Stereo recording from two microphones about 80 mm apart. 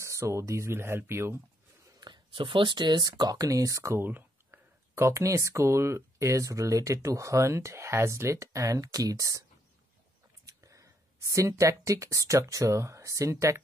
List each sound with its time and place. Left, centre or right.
0.0 s speech: right
2.0 s speech: right
4.0 s speech: right
10.4 s speech: right